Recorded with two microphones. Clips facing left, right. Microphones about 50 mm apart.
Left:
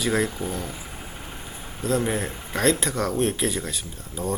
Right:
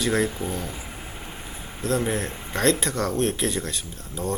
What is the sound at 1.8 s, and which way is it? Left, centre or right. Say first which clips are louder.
Speech: even; centre.